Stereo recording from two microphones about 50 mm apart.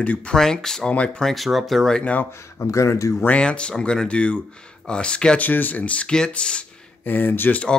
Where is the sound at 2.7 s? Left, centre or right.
Left.